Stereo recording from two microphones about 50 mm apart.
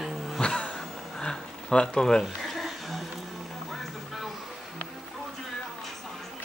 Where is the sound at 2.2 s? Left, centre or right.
Centre.